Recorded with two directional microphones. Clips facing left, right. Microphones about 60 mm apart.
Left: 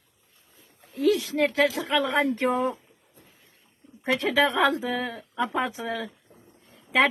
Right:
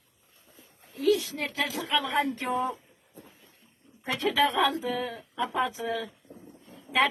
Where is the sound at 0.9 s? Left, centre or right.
Left.